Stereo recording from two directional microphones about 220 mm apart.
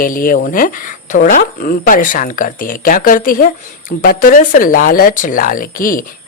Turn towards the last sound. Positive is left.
turn(degrees=40)  # may be behind; listen again after turning